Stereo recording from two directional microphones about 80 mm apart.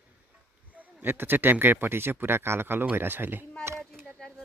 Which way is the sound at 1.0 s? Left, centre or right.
Right.